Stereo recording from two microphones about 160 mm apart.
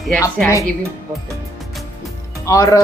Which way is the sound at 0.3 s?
15° left (ahead or behind).